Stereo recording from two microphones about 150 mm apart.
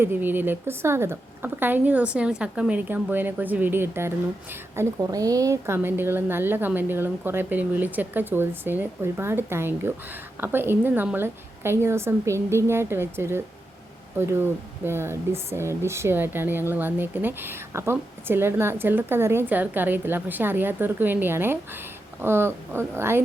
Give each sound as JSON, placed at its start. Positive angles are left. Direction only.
{"t": 0.0, "sound": "speech", "side_deg": -15}